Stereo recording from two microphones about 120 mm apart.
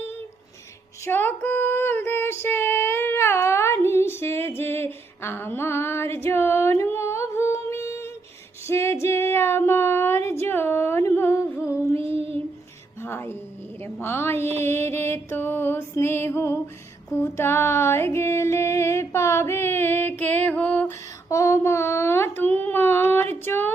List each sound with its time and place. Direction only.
1.0 s female singing: 15° left (ahead or behind)
11.9 s child singing: 50° right (ahead or behind)
13.0 s music: 20° left (ahead or behind)
13.8 s a woman's voice: 20° left (ahead or behind)
14.6 s music: 20° left (ahead or behind)
17.3 s a sound: 20° left (ahead or behind)
21.2 s a sound: 25° left (ahead or behind)